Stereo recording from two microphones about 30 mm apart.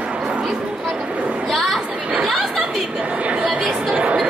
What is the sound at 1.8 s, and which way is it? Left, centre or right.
Chatter, right.